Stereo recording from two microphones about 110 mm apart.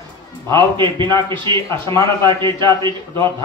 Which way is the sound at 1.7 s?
25° left (ahead or behind).